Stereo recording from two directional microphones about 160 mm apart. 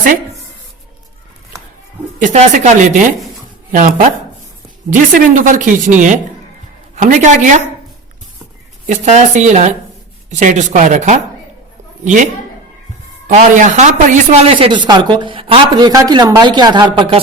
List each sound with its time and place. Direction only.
2.2 s a woman's voice: 50° right (ahead or behind)
8.9 s speech: 45° right (ahead or behind)
15.9 s speech: 25° right (ahead or behind)